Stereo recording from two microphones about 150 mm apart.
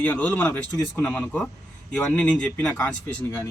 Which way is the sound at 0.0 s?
10° left (ahead or behind).